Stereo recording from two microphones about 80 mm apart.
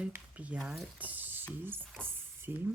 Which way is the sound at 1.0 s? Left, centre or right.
Right.